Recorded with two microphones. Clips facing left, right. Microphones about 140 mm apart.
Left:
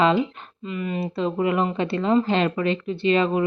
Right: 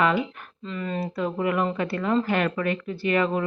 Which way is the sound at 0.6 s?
10° left (ahead or behind).